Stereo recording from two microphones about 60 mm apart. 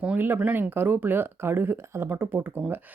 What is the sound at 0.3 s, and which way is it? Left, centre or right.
Speech, right.